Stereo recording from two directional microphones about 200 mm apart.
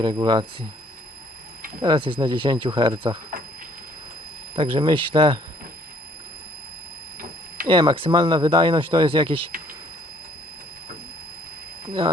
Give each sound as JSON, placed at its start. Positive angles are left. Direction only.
{"t": 0.0, "sound": "speech", "side_deg": -20}
{"t": 1.8, "sound": "speech", "side_deg": -25}
{"t": 4.5, "sound": "speech", "side_deg": -30}
{"t": 7.7, "sound": "speech", "side_deg": -25}